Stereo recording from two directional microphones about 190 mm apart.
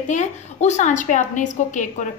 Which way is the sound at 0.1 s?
40° left (ahead or behind).